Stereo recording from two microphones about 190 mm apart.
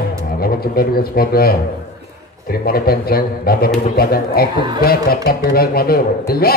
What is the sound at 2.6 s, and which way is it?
A man's voice, 55° left (ahead or behind).